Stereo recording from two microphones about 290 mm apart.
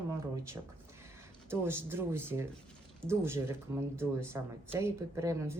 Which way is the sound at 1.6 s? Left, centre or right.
Centre.